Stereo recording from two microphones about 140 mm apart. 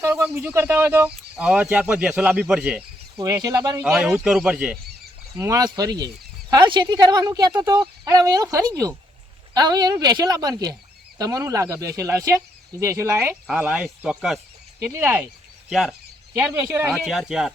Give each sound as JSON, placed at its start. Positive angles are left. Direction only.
{"t": 0.0, "sound": "speech", "side_deg": -15}
{"t": 3.2, "sound": "speech", "side_deg": -25}
{"t": 3.8, "sound": "speech", "side_deg": -5}
{"t": 5.4, "sound": "speech", "side_deg": -25}
{"t": 13.5, "sound": "speech", "side_deg": -10}
{"t": 15.7, "sound": "speech", "side_deg": -5}
{"t": 16.3, "sound": "speech", "side_deg": -15}
{"t": 16.9, "sound": "speech", "side_deg": 0}